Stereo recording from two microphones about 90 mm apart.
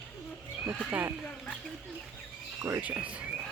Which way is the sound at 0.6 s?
10° right (ahead or behind).